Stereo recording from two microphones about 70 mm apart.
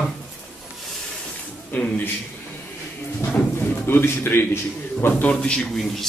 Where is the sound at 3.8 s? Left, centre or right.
Left.